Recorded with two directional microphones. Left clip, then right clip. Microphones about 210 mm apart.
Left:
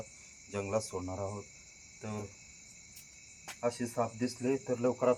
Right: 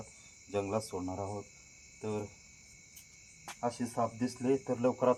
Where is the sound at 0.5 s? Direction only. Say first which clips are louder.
Even; 10° left (ahead or behind).